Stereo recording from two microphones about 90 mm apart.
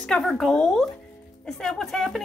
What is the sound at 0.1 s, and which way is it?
Speech, 5° left (ahead or behind).